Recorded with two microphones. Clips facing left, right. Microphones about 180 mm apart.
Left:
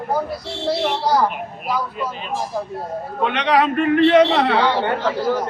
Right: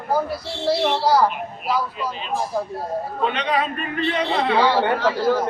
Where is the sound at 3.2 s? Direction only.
70° left (ahead or behind).